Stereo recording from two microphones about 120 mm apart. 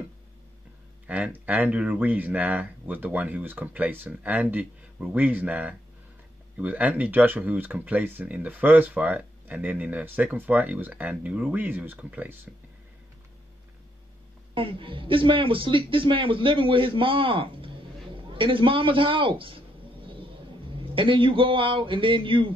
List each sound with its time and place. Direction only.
1.0 s speech: 10° right (ahead or behind)
14.5 s a man's voice: 45° right (ahead or behind)
20.7 s speech: 45° right (ahead or behind)